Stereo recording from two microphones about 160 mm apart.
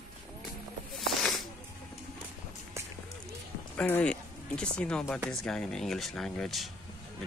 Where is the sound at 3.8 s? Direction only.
10° left (ahead or behind).